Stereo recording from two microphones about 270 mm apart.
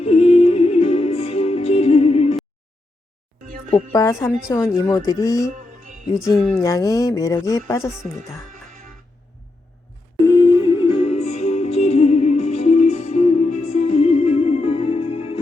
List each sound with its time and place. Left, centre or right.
0.0 s music: left
3.7 s speech: centre
6.5 s speech: centre
10.2 s music: centre